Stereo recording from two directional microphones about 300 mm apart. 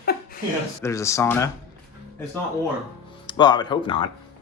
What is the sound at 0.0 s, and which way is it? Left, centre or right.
Chuckle, left.